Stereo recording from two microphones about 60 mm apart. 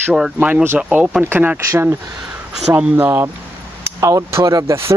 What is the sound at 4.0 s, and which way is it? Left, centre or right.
Speech, right.